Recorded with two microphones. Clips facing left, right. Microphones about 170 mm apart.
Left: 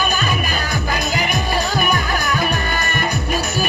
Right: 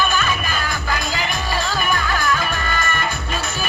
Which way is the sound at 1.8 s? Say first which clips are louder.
Left 1 dB; 20° left (ahead or behind).